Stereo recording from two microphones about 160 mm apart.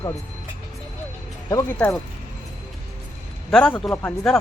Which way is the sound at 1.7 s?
10° left (ahead or behind).